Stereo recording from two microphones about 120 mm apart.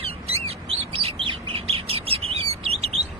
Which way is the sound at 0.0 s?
55° right (ahead or behind).